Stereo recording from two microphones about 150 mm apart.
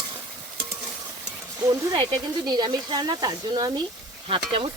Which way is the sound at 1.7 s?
30° right (ahead or behind).